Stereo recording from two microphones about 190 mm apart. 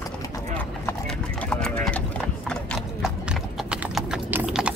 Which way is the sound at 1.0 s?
5° left (ahead or behind).